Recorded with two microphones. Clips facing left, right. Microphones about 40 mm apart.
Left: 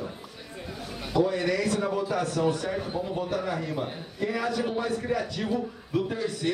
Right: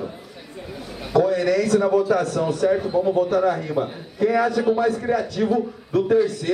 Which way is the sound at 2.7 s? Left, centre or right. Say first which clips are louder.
Right 10 dB; centre.